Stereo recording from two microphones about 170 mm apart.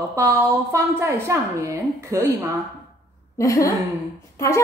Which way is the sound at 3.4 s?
20° left (ahead or behind).